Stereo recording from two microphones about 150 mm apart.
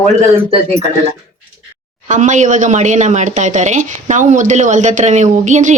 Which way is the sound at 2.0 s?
55° right (ahead or behind).